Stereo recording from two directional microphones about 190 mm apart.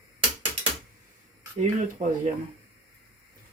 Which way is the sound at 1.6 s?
40° right (ahead or behind).